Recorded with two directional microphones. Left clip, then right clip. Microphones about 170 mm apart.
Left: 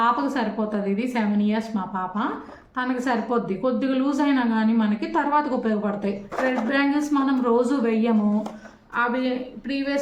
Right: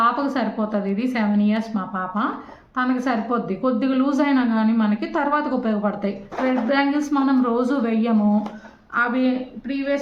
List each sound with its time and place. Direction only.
0.0 s a woman's voice: 25° right (ahead or behind)